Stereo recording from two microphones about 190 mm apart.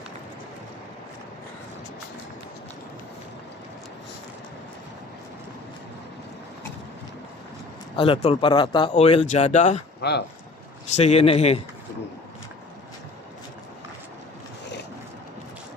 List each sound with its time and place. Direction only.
7.9 s speech: 30° left (ahead or behind)
10.0 s speech: 60° left (ahead or behind)
10.9 s speech: 35° left (ahead or behind)